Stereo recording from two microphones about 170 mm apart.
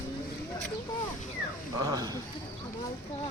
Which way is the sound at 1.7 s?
20° right (ahead or behind).